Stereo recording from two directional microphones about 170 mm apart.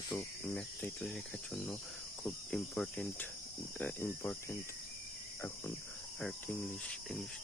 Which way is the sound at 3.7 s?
10° left (ahead or behind).